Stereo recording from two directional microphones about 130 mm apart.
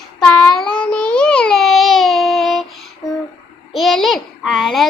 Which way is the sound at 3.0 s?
25° left (ahead or behind).